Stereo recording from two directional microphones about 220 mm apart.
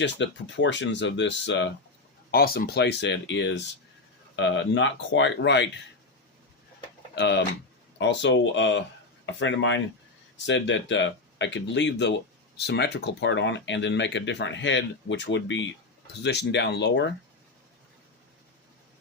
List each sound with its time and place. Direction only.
0.0 s speech: 55° left (ahead or behind)
2.3 s speech: 45° left (ahead or behind)
7.2 s speech: 50° left (ahead or behind)